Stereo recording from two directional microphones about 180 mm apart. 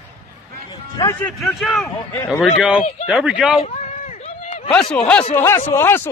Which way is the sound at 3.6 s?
35° left (ahead or behind).